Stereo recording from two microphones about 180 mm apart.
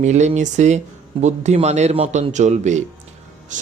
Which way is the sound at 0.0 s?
40° right (ahead or behind).